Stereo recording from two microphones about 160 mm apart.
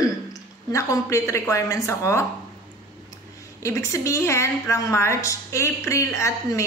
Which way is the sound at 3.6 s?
20° left (ahead or behind).